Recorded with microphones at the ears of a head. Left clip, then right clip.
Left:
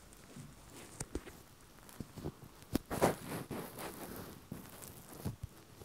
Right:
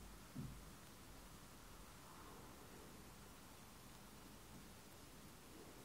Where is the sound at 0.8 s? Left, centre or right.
Left.